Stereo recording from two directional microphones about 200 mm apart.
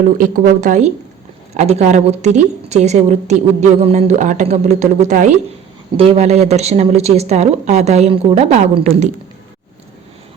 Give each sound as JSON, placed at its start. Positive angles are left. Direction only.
{"t": 0.2, "sound": "a woman's voice", "side_deg": -45}